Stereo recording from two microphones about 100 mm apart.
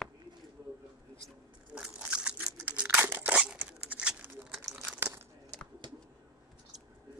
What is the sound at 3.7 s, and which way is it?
Patter, 10° right (ahead or behind).